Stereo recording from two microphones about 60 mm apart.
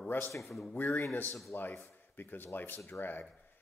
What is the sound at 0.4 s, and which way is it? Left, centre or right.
Speech, centre.